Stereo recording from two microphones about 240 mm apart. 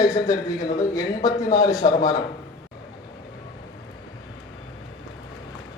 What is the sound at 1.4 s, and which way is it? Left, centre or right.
Speech, left.